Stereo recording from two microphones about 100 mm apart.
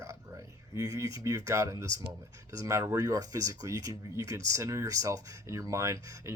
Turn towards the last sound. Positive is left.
turn(degrees=-30)  # may be behind; listen again after turning